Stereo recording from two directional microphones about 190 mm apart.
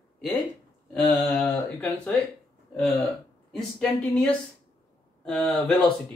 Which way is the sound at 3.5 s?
5° left (ahead or behind).